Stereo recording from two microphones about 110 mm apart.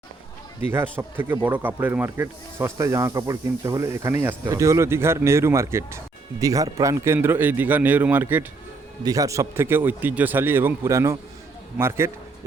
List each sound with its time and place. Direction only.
0.7 s speech: 20° right (ahead or behind)
6.9 s a man's voice: 20° right (ahead or behind)
9.0 s speech: 30° right (ahead or behind)